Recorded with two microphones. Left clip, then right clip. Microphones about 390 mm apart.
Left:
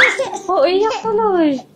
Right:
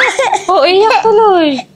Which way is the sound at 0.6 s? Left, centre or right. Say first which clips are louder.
Right 6 dB; right.